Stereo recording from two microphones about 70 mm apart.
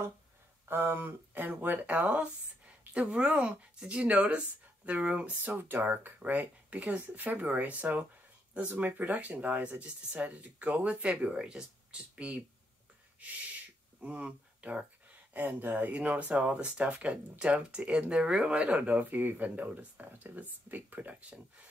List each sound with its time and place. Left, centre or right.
0.7 s speech: right; by 12.4 s centre
13.2 s a sound: right
15.4 s speech: right